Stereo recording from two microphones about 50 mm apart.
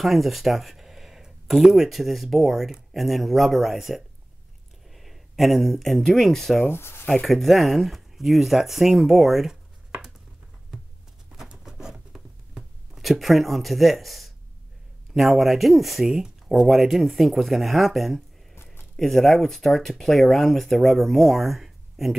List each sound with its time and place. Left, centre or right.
0.0 s speech: centre
6.7 s speech: left
7.2 s speech: centre
11.5 s writing: centre
13.0 s speech: centre
16.1 s speech: centre
18.5 s a sound: left
18.9 s speech: centre